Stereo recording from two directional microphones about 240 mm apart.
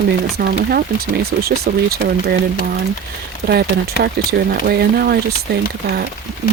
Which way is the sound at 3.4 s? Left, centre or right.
Right.